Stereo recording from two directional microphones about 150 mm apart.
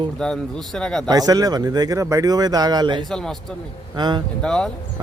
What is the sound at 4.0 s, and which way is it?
Speech, 30° right (ahead or behind).